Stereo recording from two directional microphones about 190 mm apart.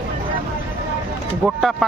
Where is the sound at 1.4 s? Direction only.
Centre (ahead or behind).